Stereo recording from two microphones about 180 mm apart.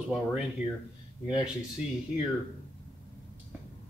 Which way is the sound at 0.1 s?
5° right (ahead or behind).